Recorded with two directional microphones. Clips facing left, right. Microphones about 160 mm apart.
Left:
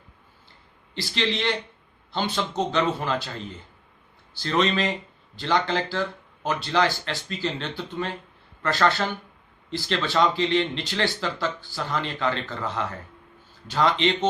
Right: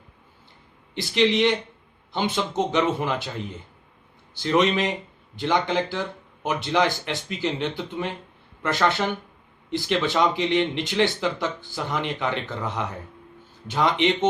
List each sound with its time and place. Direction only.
0.9 s speech: 20° right (ahead or behind)
4.4 s speech: 15° right (ahead or behind)